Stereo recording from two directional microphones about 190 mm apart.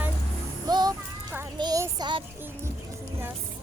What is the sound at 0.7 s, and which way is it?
Music, 20° right (ahead or behind).